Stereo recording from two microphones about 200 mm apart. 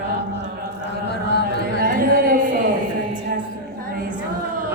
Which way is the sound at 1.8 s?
45° right (ahead or behind).